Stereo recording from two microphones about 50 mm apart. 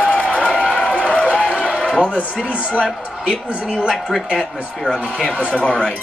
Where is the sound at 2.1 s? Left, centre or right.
Left.